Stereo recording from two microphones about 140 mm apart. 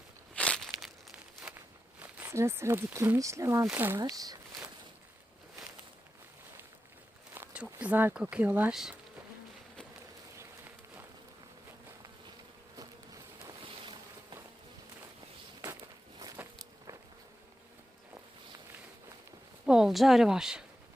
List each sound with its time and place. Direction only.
0.3 s a sound: 5° left (ahead or behind)
2.0 s speech: 15° right (ahead or behind)
4.1 s speech: 25° right (ahead or behind)
7.3 s speech: 10° right (ahead or behind)
10.3 s run: 15° right (ahead or behind)
15.6 s walk: 25° right (ahead or behind)
19.6 s speech: 5° right (ahead or behind)